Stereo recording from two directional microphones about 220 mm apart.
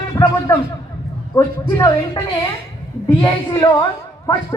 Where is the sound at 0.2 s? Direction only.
15° left (ahead or behind).